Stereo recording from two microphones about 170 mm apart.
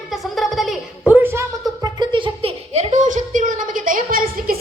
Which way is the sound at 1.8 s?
25° right (ahead or behind).